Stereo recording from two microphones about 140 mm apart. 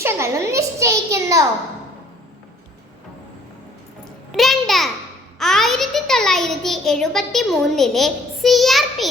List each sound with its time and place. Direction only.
0.0 s a child's voice: 20° right (ahead or behind)
4.3 s a child's voice: centre (ahead or behind)